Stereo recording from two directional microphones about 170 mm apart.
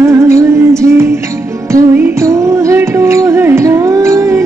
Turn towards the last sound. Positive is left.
turn(degrees=-15)  # may be behind; listen again after turning